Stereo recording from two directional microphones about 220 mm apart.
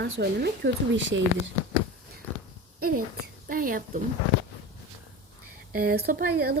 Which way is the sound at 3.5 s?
40° right (ahead or behind).